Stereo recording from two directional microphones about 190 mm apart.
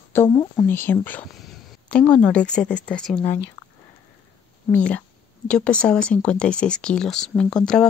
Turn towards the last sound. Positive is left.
turn(degrees=5)  # may be behind; listen again after turning